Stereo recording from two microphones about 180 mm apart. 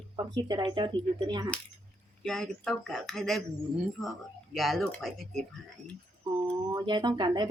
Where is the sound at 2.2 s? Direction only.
Centre (ahead or behind).